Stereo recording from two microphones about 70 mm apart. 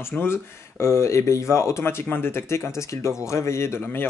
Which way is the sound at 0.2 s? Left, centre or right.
Left.